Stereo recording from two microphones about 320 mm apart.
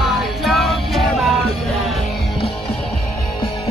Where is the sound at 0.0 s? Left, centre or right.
Centre.